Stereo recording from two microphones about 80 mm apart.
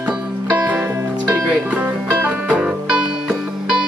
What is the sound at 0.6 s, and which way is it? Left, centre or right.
Music, centre.